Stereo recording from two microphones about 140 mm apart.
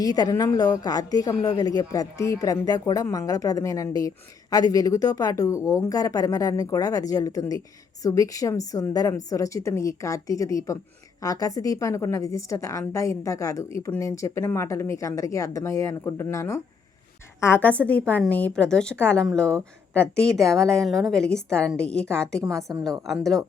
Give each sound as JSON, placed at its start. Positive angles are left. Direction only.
{"t": 0.0, "sound": "a woman's voice", "side_deg": 30}